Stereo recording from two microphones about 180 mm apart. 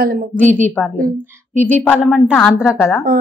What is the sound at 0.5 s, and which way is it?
Speech, 10° left (ahead or behind).